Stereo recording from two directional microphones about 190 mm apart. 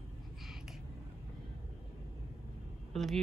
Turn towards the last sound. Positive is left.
turn(degrees=0)  # may be behind; listen again after turning